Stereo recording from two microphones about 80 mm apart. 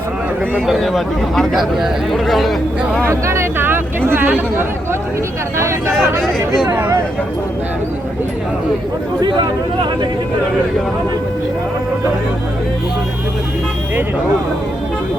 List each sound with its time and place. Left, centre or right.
0.7 s speech: centre
3.0 s speech: right
5.5 s speech: right
6.7 s speech: right